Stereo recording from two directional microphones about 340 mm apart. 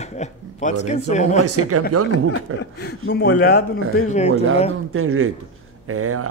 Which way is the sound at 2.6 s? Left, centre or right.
Left.